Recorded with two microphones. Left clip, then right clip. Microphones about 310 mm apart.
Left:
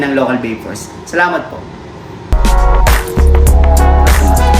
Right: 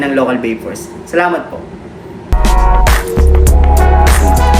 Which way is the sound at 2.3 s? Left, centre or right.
Centre.